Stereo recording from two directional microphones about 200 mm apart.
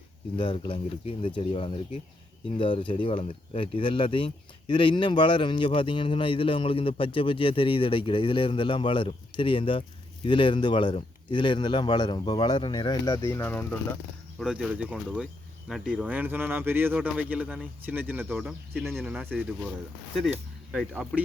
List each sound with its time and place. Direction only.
0.3 s speech: 25° left (ahead or behind)
14.3 s speech: 5° right (ahead or behind)